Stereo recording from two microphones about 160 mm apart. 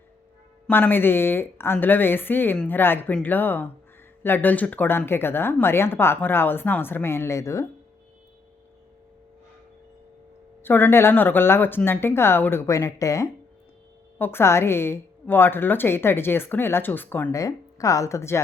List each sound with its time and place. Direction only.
0.7 s speech: 15° left (ahead or behind)
10.6 s a woman's voice: 15° left (ahead or behind)